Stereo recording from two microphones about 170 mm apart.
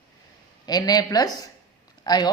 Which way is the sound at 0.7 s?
25° left (ahead or behind).